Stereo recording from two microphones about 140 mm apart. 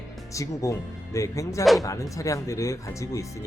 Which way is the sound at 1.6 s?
Centre (ahead or behind).